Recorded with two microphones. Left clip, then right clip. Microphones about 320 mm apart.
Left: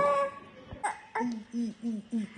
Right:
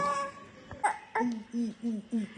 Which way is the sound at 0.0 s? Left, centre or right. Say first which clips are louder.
Left 5 dB; centre.